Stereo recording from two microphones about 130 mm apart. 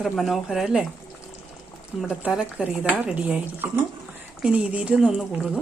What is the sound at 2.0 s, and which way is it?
Speech, 5° right (ahead or behind).